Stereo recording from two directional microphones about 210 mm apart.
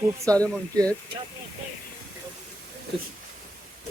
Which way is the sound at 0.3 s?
15° right (ahead or behind).